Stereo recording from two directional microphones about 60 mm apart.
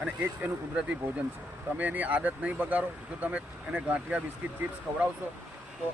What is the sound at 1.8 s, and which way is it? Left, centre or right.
Speech, right.